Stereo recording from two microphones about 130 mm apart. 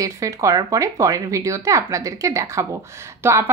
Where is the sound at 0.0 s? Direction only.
25° right (ahead or behind).